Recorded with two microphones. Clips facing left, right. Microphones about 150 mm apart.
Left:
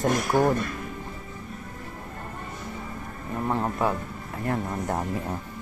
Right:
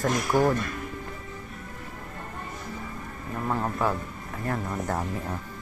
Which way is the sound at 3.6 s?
15° left (ahead or behind).